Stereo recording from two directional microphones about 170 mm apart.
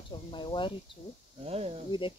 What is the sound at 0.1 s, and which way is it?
Speech, 30° left (ahead or behind).